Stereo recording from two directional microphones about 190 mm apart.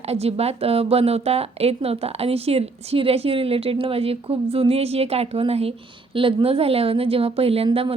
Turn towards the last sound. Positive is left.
turn(degrees=-30)  # may be behind; listen again after turning